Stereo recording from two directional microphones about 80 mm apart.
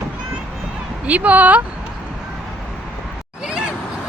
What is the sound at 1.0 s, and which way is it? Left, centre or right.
Speech, centre.